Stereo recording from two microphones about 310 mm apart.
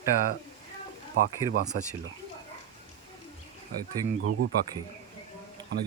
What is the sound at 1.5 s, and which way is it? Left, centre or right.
Speech, right.